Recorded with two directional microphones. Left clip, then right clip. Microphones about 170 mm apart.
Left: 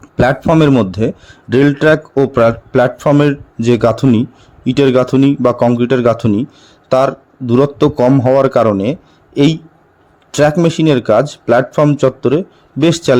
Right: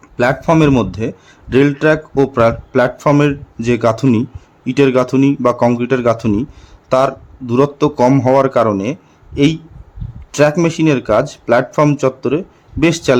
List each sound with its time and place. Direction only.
0.0 s a sound: 25° left (ahead or behind)
0.5 s a man's voice: 15° left (ahead or behind)
10.6 s a man's voice: 15° left (ahead or behind)